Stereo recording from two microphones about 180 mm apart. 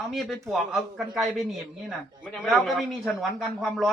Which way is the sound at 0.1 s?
Centre (ahead or behind).